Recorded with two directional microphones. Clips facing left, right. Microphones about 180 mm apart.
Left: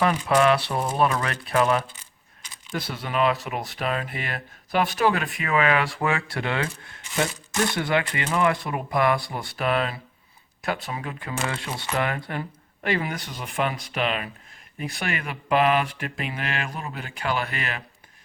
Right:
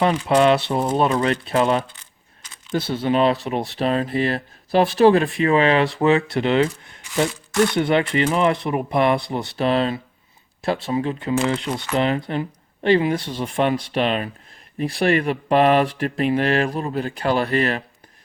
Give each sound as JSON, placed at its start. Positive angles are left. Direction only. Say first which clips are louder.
{"t": 0.0, "sound": "speech", "louder": "right 4 dB", "side_deg": -25}